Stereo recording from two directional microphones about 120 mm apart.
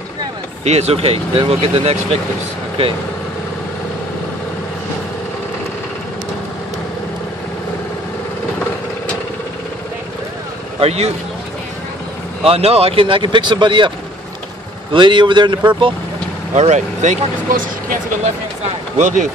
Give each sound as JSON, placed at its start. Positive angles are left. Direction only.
{"t": 0.7, "sound": "speech", "side_deg": -60}
{"t": 10.8, "sound": "a man's voice", "side_deg": -60}
{"t": 12.4, "sound": "speech", "side_deg": -60}
{"t": 16.5, "sound": "speech", "side_deg": -70}
{"t": 18.9, "sound": "speech", "side_deg": -90}